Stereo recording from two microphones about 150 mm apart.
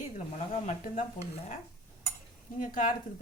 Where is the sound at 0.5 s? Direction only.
50° left (ahead or behind).